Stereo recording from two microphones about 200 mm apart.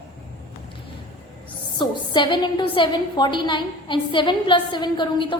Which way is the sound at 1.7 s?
25° left (ahead or behind).